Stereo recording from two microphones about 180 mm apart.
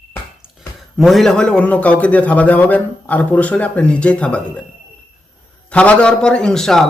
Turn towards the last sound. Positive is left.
turn(degrees=0)  # may be behind; listen again after turning